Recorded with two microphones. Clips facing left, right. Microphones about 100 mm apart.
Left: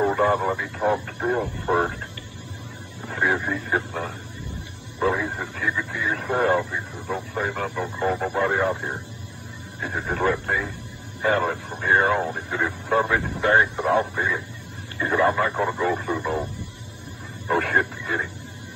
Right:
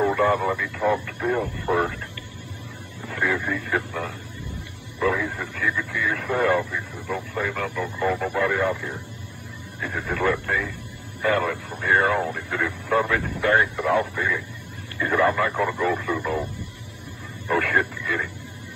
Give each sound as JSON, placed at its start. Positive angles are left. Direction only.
{"t": 0.0, "sound": "speech", "side_deg": 25}
{"t": 3.1, "sound": "speech", "side_deg": 25}
{"t": 17.5, "sound": "speech", "side_deg": 25}